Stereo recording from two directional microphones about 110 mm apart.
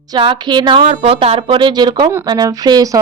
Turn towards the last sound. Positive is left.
turn(degrees=-35)  # may be behind; listen again after turning